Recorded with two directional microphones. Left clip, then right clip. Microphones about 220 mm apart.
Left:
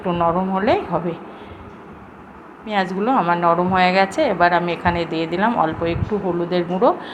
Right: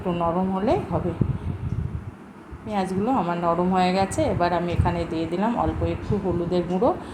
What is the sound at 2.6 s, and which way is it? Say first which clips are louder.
A woman's voice: left 5 dB; 10° left (ahead or behind).